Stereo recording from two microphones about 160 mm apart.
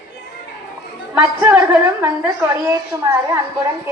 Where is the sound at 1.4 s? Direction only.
10° right (ahead or behind).